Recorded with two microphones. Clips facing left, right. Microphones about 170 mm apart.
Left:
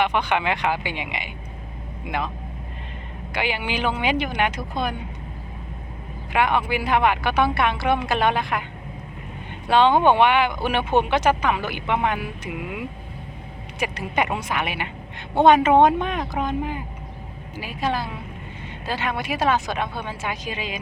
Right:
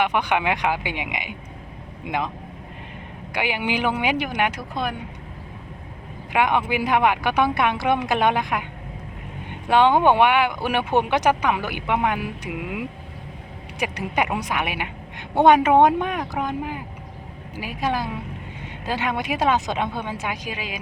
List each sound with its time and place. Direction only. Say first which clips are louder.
0.0 s speech: even; 15° right (ahead or behind)
3.3 s speech: right 1 dB; 15° right (ahead or behind)
6.3 s speech: right 1 dB; 15° right (ahead or behind)
9.6 s speech: even; 15° right (ahead or behind)